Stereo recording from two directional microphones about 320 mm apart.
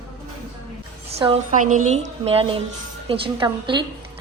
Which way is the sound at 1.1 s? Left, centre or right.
Centre.